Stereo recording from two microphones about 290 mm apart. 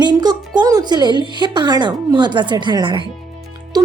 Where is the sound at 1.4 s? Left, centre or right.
Centre.